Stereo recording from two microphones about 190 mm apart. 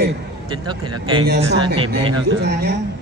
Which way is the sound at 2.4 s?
60° right (ahead or behind).